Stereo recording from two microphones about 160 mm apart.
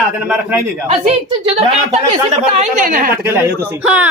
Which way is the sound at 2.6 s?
55° right (ahead or behind).